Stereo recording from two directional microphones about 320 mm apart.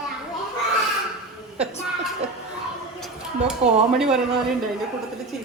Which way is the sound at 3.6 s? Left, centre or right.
Centre.